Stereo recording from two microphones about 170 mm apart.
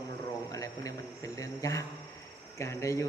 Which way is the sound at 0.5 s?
20° left (ahead or behind).